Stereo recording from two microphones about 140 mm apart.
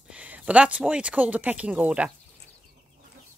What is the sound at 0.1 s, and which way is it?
Speech, 10° right (ahead or behind).